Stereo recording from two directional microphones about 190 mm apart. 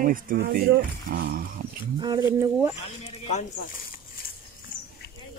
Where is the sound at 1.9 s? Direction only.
20° right (ahead or behind).